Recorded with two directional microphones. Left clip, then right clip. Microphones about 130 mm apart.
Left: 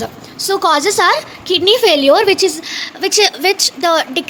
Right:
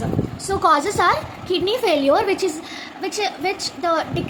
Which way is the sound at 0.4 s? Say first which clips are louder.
Left 5 dB; 40° left (ahead or behind).